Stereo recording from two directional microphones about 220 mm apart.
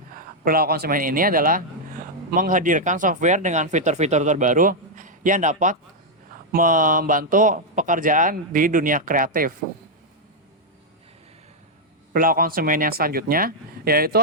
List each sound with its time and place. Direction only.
0.4 s speech: 45° right (ahead or behind)
12.1 s speech: 40° right (ahead or behind)